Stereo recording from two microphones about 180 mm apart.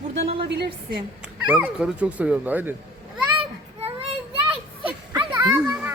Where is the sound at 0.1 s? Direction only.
35° right (ahead or behind).